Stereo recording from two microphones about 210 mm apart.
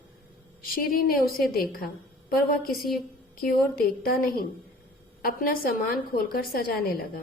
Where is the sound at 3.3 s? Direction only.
45° left (ahead or behind).